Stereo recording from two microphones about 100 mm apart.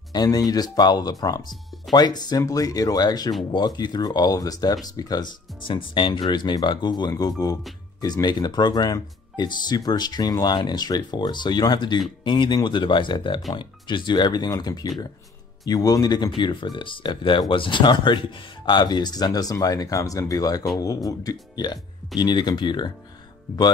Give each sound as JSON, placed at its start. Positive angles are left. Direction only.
{"t": 0.1, "sound": "speech", "side_deg": 40}
{"t": 5.7, "sound": "speech", "side_deg": 55}